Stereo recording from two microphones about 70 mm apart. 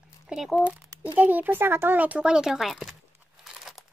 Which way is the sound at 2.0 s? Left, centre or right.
Centre.